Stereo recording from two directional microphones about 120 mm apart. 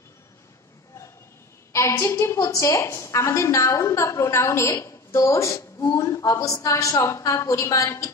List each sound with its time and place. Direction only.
1.7 s a woman's voice: 25° left (ahead or behind)